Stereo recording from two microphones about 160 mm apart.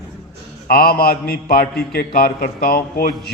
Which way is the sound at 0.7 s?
70° left (ahead or behind).